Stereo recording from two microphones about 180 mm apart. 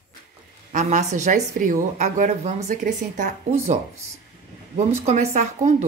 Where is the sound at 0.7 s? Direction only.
40° right (ahead or behind).